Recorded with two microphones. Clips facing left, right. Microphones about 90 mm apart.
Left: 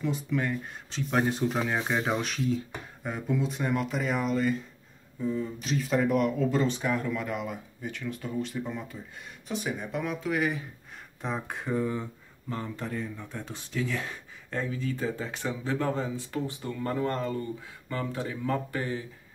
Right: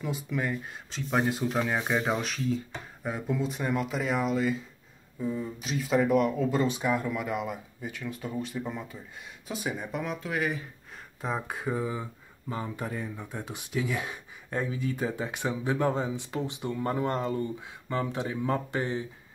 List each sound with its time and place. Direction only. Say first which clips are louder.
0.0 s speech: left 2 dB; 5° right (ahead or behind); by 19.0 s 20° right (ahead or behind)